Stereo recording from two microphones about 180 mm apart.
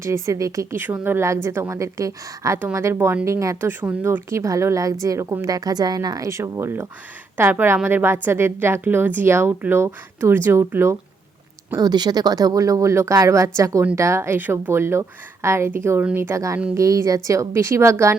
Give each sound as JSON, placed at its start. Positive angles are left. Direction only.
{"t": 0.0, "sound": "speech", "side_deg": -15}